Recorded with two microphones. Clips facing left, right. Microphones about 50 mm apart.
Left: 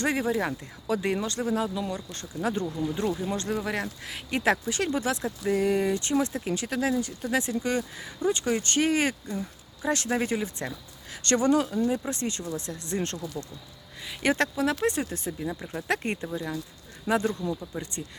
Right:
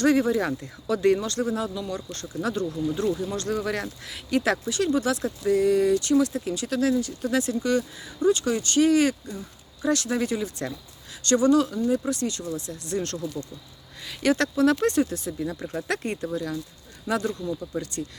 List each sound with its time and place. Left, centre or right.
0.0 s speech: centre
1.9 s speech: centre
2.4 s speech: left
4.1 s speech: left
11.4 s speech: left
14.2 s speech: left
14.4 s speech: centre
15.1 s speech: left
15.4 s speech: centre; by 17.5 s left
17.7 s speech: centre